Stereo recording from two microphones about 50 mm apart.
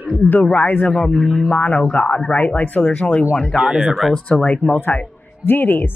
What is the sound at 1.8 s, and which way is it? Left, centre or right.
Speech, left.